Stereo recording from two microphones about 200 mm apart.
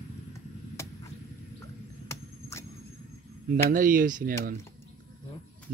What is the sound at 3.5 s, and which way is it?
Speech, 40° right (ahead or behind).